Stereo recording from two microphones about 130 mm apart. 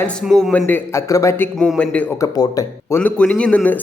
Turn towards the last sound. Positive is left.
turn(degrees=10)  # may be behind; listen again after turning